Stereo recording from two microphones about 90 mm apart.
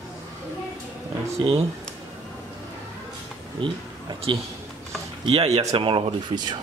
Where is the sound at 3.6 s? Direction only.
65° right (ahead or behind).